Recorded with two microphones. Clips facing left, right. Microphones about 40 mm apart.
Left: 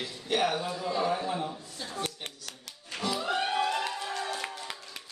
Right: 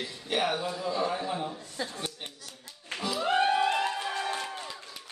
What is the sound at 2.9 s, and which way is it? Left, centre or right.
Music, right.